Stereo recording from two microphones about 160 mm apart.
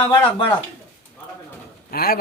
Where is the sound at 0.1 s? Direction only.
30° left (ahead or behind).